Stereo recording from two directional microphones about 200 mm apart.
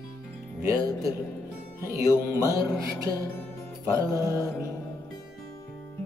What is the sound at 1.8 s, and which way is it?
Music, 15° right (ahead or behind).